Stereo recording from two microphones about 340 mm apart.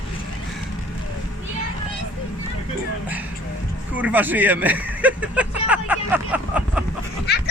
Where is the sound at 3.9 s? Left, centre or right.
Centre.